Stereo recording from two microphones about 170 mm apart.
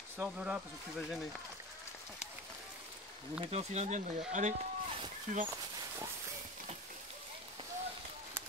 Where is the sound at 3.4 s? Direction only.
40° right (ahead or behind).